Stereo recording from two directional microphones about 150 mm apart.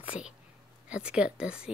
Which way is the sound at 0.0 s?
10° right (ahead or behind).